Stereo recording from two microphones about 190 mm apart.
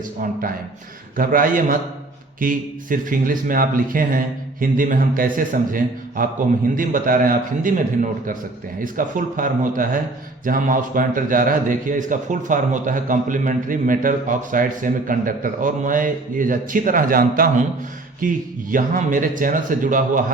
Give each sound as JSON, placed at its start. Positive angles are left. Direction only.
{"t": 1.1, "sound": "a man's voice", "side_deg": -45}